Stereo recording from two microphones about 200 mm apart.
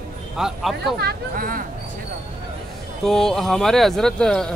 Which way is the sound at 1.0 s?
45° right (ahead or behind).